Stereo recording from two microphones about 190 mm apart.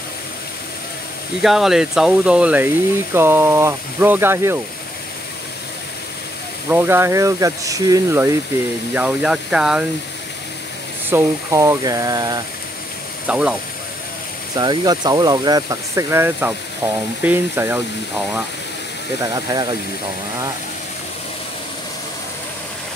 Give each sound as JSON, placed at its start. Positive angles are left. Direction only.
{"t": 1.4, "sound": "speech", "side_deg": 0}
{"t": 6.7, "sound": "speech", "side_deg": -10}
{"t": 8.9, "sound": "speech", "side_deg": -5}
{"t": 11.1, "sound": "speech", "side_deg": -15}
{"t": 13.3, "sound": "speech", "side_deg": -5}
{"t": 14.5, "sound": "speech", "side_deg": -20}
{"t": 19.2, "sound": "speech", "side_deg": -20}